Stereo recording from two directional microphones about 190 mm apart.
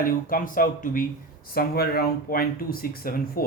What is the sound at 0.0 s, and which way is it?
Speech, 45° left (ahead or behind).